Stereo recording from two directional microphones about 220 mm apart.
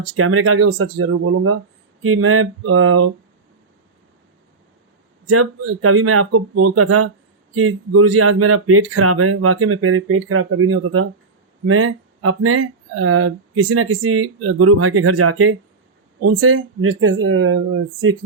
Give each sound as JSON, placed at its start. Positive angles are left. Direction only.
{"t": 0.0, "sound": "speech", "side_deg": -75}
{"t": 5.3, "sound": "speech", "side_deg": -80}
{"t": 16.2, "sound": "speech", "side_deg": -70}